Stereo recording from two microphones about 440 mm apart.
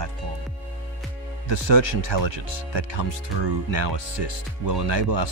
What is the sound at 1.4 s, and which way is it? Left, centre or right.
Speech, right.